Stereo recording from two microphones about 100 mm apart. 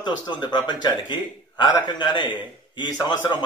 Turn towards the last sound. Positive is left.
turn(degrees=45)  # may be behind; listen again after turning